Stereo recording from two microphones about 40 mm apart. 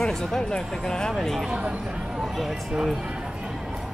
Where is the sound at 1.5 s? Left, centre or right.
Right.